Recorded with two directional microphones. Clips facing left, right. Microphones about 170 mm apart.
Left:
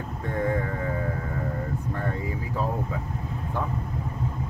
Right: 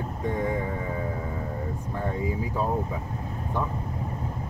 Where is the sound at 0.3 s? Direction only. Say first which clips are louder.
Left 2 dB; 15° right (ahead or behind).